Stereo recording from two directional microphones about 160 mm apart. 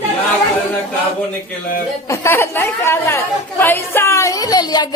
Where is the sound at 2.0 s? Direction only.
15° left (ahead or behind).